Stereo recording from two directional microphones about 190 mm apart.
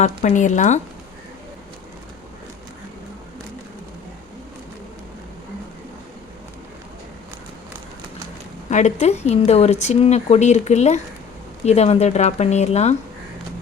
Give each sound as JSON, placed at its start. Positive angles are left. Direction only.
{"t": 0.0, "sound": "speech", "side_deg": 35}
{"t": 8.7, "sound": "speech", "side_deg": 35}